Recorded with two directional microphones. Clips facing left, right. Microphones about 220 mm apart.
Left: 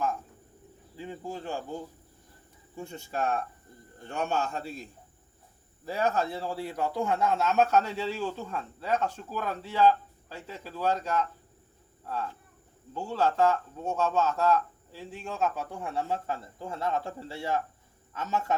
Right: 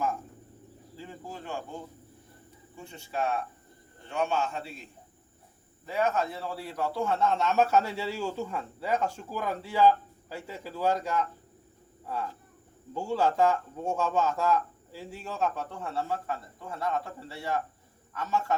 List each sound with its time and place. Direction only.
0.9 s speech: 20° left (ahead or behind)
2.7 s a man's voice: 45° left (ahead or behind); by 18.5 s 20° left (ahead or behind)